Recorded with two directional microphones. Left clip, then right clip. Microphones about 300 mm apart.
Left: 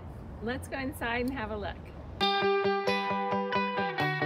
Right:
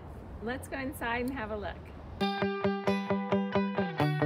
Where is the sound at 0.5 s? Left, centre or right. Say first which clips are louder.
Left 1 dB; centre.